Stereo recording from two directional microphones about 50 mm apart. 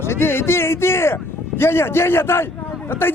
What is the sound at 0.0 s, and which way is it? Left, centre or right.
A man's voice, left.